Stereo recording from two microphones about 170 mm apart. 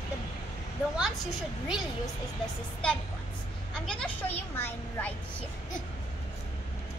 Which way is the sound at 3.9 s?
10° left (ahead or behind).